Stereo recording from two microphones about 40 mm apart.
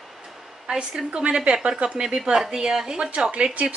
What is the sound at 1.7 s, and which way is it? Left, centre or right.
Speech, right.